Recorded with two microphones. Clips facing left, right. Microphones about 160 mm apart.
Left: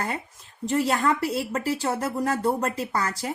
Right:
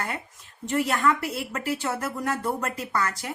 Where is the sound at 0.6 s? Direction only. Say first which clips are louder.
Left 1 dB; 35° left (ahead or behind).